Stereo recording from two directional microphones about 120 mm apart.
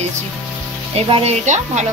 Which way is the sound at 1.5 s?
90° right.